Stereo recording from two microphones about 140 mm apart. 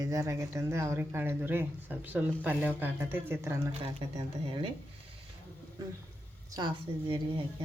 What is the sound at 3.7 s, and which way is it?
Speech, 45° right (ahead or behind).